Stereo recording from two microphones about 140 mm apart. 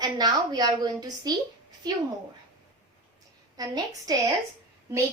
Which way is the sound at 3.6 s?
25° right (ahead or behind).